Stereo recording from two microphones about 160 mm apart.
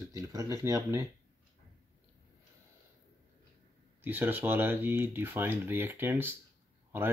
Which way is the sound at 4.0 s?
10° right (ahead or behind).